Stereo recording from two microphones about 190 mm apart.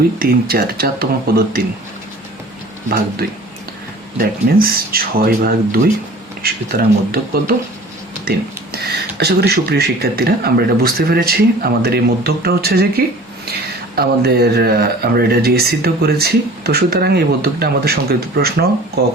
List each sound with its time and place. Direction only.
0.2 s speech: 50° right (ahead or behind)
4.2 s speech: 50° right (ahead or behind)
8.7 s speech: 55° right (ahead or behind)
13.9 s speech: 55° right (ahead or behind)